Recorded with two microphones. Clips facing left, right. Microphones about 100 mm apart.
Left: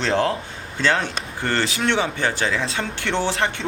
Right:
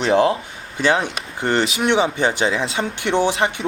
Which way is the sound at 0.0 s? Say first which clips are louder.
Right 5 dB; 20° right (ahead or behind).